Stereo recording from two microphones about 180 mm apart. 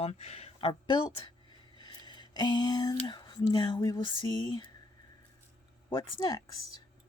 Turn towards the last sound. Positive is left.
turn(degrees=20)  # may be behind; listen again after turning